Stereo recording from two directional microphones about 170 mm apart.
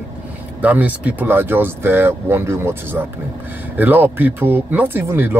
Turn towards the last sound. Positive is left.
turn(degrees=-10)  # may be behind; listen again after turning